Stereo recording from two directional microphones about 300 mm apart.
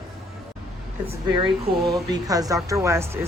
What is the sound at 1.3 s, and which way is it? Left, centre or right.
A woman's voice, centre.